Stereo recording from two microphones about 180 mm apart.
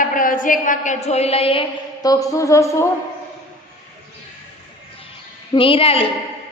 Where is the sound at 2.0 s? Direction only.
20° left (ahead or behind).